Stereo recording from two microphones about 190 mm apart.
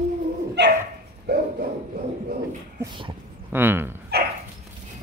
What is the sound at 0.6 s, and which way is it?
Dog, 65° right (ahead or behind).